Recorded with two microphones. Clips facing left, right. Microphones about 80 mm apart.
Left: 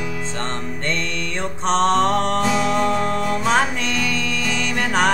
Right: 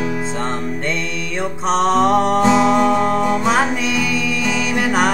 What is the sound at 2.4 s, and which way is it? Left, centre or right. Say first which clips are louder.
Music: right 6 dB; right.